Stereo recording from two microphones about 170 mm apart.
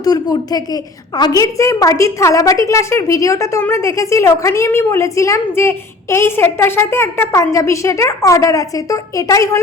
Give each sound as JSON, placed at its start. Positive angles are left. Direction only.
{"t": 0.0, "sound": "a woman's voice", "side_deg": 20}